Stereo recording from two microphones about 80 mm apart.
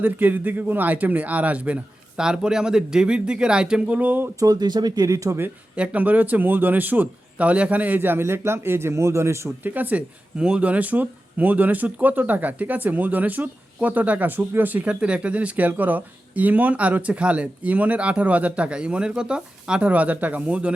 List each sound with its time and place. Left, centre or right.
0.0 s speech: centre
4.4 s speech: right
5.7 s speech: centre; by 9.5 s right
9.6 s speech: right